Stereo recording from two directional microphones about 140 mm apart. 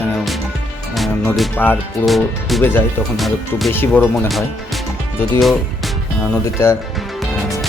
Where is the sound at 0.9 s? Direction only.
Centre (ahead or behind).